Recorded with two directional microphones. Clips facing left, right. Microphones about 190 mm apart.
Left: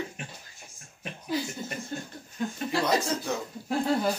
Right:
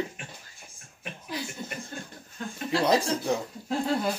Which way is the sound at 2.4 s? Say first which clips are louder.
Left 5 dB; 15° left (ahead or behind).